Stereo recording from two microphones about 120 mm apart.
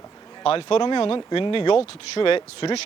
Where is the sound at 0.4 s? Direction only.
50° left (ahead or behind).